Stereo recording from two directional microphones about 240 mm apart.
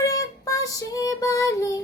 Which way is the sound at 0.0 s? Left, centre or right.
Centre.